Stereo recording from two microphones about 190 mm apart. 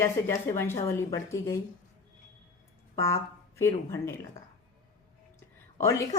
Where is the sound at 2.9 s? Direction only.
15° left (ahead or behind).